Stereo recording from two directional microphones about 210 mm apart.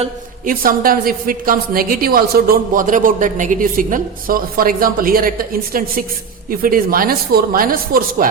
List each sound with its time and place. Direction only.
0.0 s a woman's voice: 40° right (ahead or behind)